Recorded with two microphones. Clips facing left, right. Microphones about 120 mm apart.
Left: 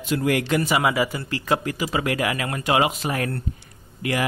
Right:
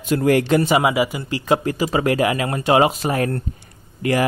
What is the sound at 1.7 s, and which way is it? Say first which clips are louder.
Speech: right 5 dB; 35° right (ahead or behind).